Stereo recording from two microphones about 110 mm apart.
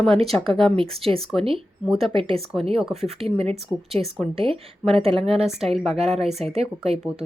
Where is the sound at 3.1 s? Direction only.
65° right (ahead or behind).